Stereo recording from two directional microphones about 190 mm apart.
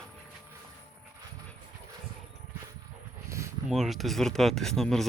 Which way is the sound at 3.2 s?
15° right (ahead or behind).